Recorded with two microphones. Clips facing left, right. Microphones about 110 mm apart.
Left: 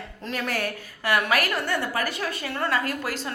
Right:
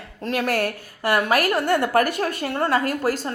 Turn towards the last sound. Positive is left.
turn(degrees=-40)  # may be behind; listen again after turning